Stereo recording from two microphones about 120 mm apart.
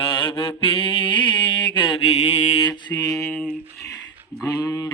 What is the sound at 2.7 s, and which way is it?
Mantra, 35° left (ahead or behind).